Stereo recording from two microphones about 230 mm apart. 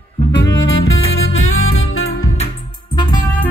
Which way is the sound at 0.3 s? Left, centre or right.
Left.